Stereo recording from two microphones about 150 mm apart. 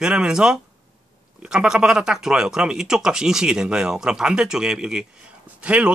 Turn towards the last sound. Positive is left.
turn(degrees=-10)  # may be behind; listen again after turning